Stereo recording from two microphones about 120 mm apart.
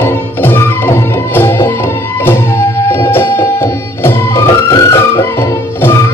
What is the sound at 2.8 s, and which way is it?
Music, 20° left (ahead or behind).